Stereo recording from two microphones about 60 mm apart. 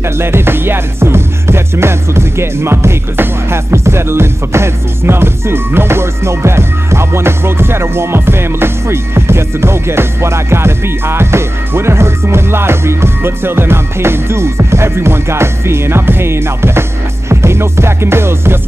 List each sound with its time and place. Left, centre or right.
0.2 s music: right